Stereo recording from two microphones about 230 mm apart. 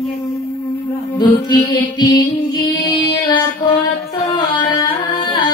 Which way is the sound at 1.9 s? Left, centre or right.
Centre.